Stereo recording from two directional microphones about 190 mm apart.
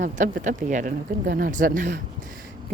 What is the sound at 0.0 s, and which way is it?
Speech, 40° right (ahead or behind).